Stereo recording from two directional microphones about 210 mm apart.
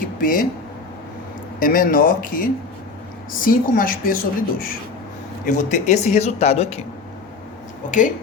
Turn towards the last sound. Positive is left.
turn(degrees=35)  # may be behind; listen again after turning